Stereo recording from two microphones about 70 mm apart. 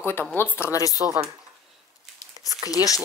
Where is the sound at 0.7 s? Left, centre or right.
Left.